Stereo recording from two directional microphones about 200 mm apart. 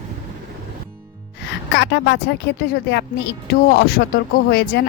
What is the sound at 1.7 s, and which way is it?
A woman's voice, 60° left (ahead or behind).